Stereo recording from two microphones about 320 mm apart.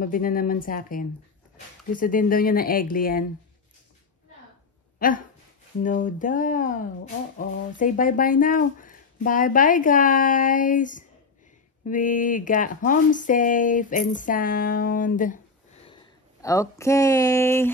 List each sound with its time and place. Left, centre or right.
0.0 s speech: left
4.9 s a sound: left
5.8 s speech: left
15.9 s speech: centre